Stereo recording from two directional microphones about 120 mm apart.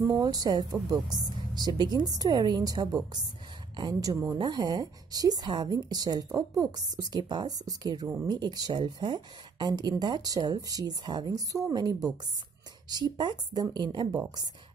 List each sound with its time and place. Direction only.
0.0 s speech: 30° right (ahead or behind)
4.4 s speech: 35° right (ahead or behind)